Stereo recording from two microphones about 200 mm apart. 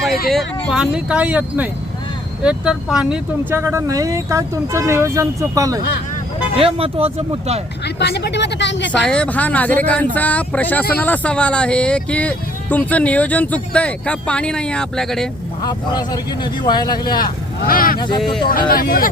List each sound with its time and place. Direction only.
0.3 s speech: centre (ahead or behind); by 5.8 s 15° right (ahead or behind)
6.6 s speech: 30° right (ahead or behind)
7.9 s speech: 55° left (ahead or behind)
9.0 s speech: 5° left (ahead or behind)
15.6 s speech: 20° left (ahead or behind)
17.7 s speech: 45° left (ahead or behind)